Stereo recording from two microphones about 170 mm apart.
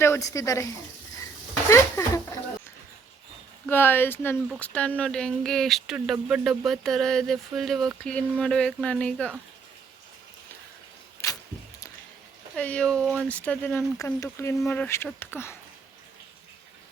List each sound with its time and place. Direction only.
0.0 s speech: 15° left (ahead or behind)
1.7 s a sound: 15° left (ahead or behind)
3.7 s speech: 10° left (ahead or behind)
11.2 s a sound: 15° left (ahead or behind)
12.5 s speech: 5° left (ahead or behind)
14.0 s speech: 20° left (ahead or behind)